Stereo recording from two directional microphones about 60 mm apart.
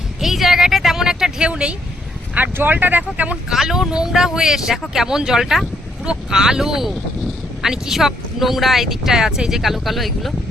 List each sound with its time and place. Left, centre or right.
0.2 s a sound: centre
2.3 s speech: right
3.5 s speech: centre